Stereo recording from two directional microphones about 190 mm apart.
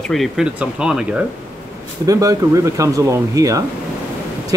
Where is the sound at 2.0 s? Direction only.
20° right (ahead or behind).